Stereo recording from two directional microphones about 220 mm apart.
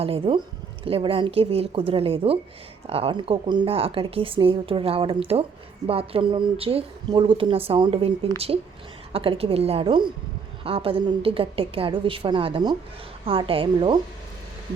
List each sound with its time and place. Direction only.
0.0 s a woman's voice: 25° right (ahead or behind)